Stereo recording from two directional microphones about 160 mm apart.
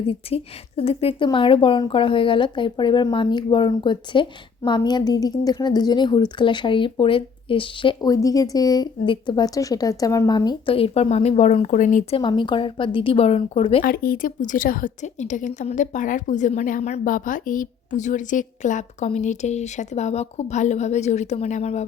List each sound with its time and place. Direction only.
0.1 s speech: 40° left (ahead or behind)
12.1 s speech: 30° left (ahead or behind)
13.8 s a woman's voice: 65° left (ahead or behind); by 21.8 s 40° left (ahead or behind)